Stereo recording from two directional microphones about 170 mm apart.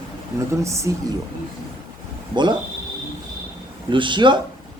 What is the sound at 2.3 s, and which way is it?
Speech, 25° right (ahead or behind).